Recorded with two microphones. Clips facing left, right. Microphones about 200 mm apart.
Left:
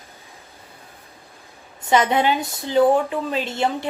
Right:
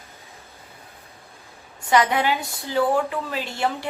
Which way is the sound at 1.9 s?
25° left (ahead or behind).